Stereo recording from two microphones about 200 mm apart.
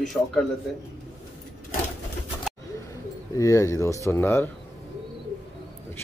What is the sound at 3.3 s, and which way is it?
Speech, 15° left (ahead or behind).